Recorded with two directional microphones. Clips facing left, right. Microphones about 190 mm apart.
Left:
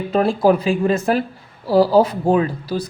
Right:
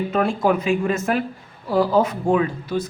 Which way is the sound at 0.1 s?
35° left (ahead or behind).